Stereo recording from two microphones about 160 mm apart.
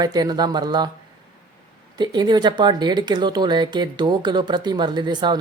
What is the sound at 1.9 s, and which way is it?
Speech, 25° right (ahead or behind).